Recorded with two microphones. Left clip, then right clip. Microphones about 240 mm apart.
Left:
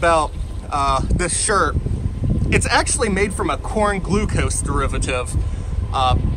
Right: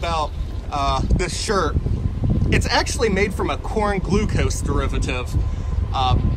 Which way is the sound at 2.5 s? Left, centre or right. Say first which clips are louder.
Left 3 dB; centre.